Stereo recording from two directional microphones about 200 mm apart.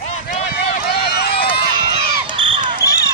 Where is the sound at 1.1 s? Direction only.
50° left (ahead or behind).